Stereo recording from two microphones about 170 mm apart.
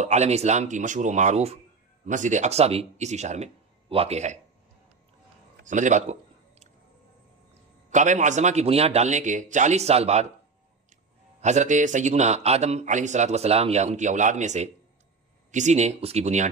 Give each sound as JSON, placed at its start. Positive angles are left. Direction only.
{"t": 0.0, "sound": "a man's voice", "side_deg": -40}
{"t": 5.7, "sound": "a man's voice", "side_deg": -45}
{"t": 7.9, "sound": "a man's voice", "side_deg": -45}
{"t": 11.4, "sound": "a man's voice", "side_deg": -45}